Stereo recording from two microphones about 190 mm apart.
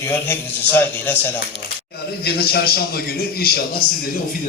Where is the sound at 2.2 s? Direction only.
55° left (ahead or behind).